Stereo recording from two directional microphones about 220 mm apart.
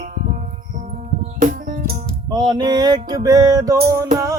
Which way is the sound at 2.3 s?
20° right (ahead or behind).